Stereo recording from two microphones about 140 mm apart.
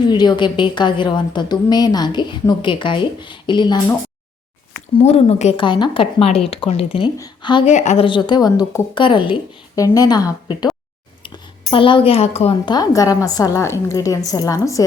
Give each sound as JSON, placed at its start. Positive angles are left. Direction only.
{"t": 0.0, "sound": "a woman's voice", "side_deg": 30}
{"t": 4.9, "sound": "a woman's voice", "side_deg": 50}
{"t": 5.6, "sound": "a woman's voice", "side_deg": 35}
{"t": 7.6, "sound": "a woman's voice", "side_deg": 55}
{"t": 8.0, "sound": "a woman's voice", "side_deg": 35}
{"t": 9.7, "sound": "a woman's voice", "side_deg": 25}
{"t": 11.7, "sound": "a woman's voice", "side_deg": 40}
{"t": 12.6, "sound": "a woman's voice", "side_deg": 30}